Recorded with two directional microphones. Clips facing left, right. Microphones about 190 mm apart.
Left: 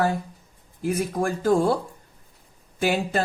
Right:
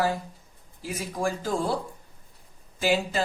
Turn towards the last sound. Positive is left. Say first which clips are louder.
# left 2 dB
turn(degrees=55)  # may be behind; listen again after turning